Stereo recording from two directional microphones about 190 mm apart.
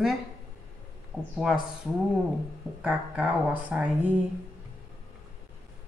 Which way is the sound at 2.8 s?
10° right (ahead or behind).